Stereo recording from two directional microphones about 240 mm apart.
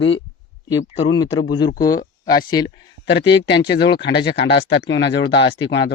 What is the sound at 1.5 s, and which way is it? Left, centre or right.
Speech, centre.